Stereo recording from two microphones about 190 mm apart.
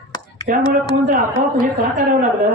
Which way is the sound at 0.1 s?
20° left (ahead or behind).